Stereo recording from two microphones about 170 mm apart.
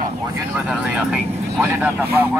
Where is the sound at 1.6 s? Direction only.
15° right (ahead or behind).